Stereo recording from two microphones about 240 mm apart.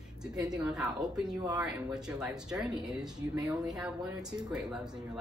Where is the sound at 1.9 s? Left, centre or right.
Centre.